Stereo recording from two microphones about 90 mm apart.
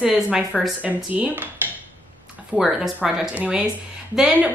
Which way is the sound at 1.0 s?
20° right (ahead or behind).